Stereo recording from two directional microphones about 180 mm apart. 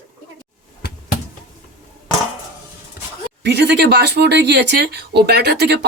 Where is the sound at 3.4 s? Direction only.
70° right (ahead or behind).